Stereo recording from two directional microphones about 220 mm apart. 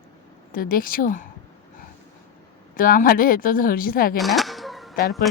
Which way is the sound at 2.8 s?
40° left (ahead or behind).